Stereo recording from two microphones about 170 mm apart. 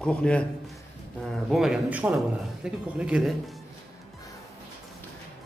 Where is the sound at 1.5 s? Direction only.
5° right (ahead or behind).